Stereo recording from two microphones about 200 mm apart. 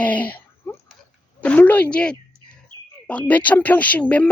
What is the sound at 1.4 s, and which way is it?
Speech, 5° left (ahead or behind).